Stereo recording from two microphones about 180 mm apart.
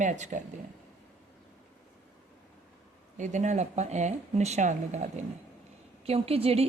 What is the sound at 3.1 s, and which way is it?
Speech, 40° right (ahead or behind).